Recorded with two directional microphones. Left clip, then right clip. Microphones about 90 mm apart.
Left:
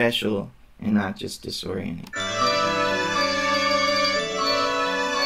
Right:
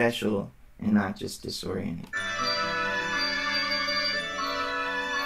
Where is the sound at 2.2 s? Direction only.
35° left (ahead or behind).